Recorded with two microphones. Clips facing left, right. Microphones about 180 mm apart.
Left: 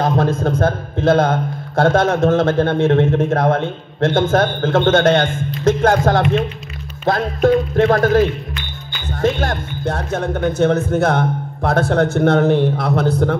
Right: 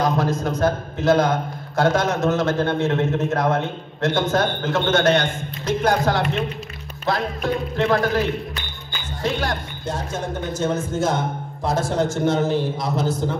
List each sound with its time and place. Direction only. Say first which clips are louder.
0.0 s a man's voice: left 4 dB; 55° left (ahead or behind)
9.2 s speech: left 6 dB; 50° left (ahead or behind)